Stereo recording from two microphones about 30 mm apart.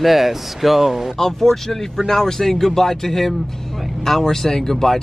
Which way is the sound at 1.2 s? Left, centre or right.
Centre.